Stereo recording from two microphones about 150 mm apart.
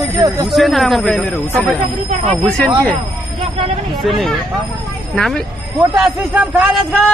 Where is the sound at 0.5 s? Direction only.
Centre (ahead or behind).